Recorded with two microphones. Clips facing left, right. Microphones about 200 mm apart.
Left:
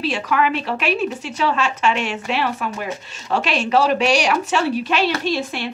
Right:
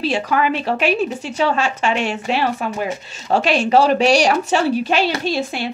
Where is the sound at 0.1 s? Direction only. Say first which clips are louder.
Even; 35° right (ahead or behind).